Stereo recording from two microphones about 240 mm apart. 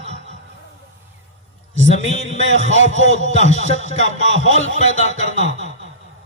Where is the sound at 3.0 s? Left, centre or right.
Right.